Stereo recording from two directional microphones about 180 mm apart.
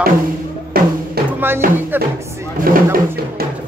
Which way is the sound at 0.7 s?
55° right (ahead or behind).